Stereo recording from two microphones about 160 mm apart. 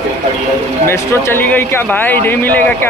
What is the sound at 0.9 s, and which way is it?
A man's voice, 15° left (ahead or behind).